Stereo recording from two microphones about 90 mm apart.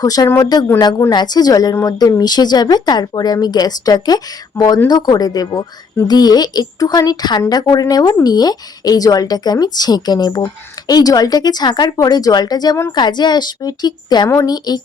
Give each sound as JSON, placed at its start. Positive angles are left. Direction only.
{"t": 0.0, "sound": "speech", "side_deg": 45}